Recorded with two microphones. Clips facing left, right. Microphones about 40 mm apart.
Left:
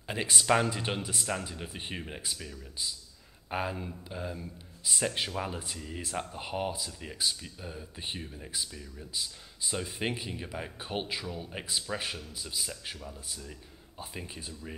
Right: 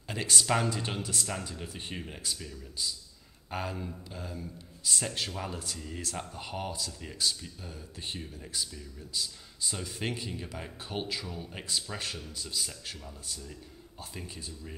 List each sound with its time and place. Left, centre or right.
0.1 s speech: centre